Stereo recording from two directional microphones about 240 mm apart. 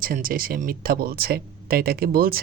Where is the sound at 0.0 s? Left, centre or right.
Right.